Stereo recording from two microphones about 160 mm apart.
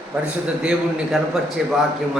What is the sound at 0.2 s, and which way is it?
A man's voice, 5° right (ahead or behind).